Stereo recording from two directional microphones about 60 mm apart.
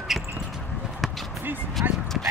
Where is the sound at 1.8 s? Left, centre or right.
Right.